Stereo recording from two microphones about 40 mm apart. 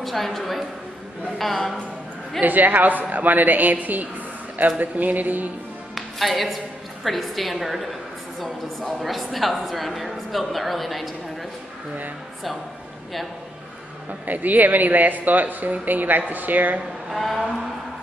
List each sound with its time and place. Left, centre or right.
0.0 s a woman's voice: centre
2.4 s speech: right
5.9 s a woman's voice: centre
14.2 s speech: right
17.1 s a woman's voice: centre